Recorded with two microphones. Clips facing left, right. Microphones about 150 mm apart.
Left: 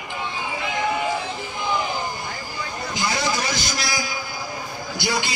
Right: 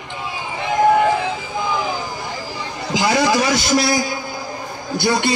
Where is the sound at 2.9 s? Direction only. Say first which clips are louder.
Right 9 dB; 80° right.